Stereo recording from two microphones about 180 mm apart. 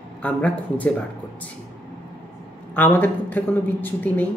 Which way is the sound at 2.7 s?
10° left (ahead or behind).